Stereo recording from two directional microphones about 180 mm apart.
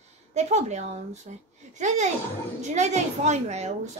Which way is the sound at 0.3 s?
40° right (ahead or behind).